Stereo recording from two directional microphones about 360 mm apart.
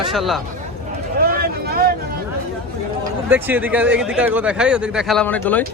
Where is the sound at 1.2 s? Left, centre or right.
Right.